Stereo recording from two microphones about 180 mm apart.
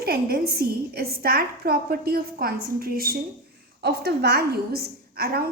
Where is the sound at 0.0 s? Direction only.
60° right (ahead or behind).